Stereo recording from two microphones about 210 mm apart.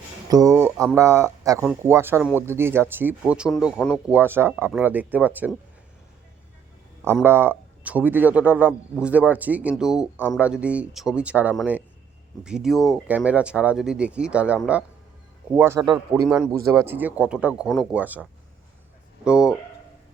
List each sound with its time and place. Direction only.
0.3 s speech: 15° right (ahead or behind)
7.0 s speech: 10° right (ahead or behind)
19.2 s speech: 5° right (ahead or behind)